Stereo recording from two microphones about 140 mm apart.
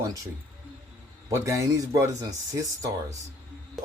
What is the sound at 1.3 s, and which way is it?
Speech, 25° right (ahead or behind).